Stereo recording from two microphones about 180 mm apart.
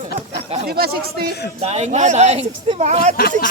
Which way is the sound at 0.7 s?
60° right (ahead or behind).